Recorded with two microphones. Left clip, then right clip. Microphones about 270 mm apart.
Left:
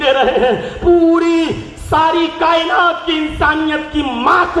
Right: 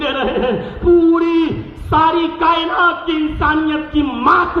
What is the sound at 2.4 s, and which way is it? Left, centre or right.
A man's voice, centre.